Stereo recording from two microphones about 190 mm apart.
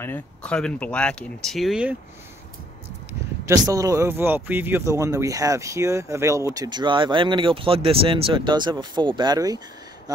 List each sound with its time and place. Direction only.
0.0 s speech: 10° left (ahead or behind)
3.4 s speech: 20° right (ahead or behind)